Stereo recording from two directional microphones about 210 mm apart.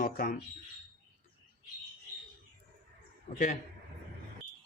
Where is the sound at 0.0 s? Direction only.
45° left (ahead or behind).